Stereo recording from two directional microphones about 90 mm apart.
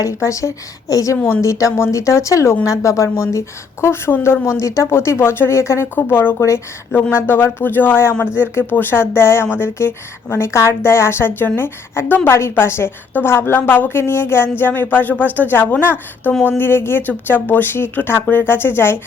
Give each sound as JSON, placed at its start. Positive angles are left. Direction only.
{"t": 0.0, "sound": "a woman's voice", "side_deg": 35}